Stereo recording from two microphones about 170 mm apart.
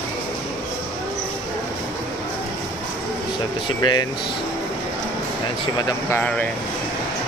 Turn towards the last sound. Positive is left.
turn(degrees=10)  # may be behind; listen again after turning